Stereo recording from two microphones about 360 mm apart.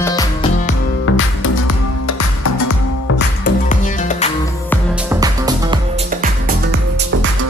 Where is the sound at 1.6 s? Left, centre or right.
Left.